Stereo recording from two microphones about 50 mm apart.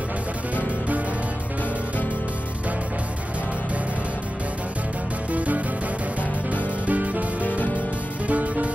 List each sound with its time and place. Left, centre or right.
5.3 s music: right
6.9 s music: right
8.3 s music: right